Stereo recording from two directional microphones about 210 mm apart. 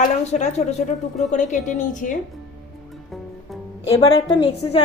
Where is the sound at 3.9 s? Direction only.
25° left (ahead or behind).